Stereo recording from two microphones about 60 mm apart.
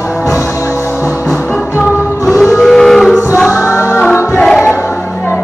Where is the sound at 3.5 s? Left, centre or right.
Left.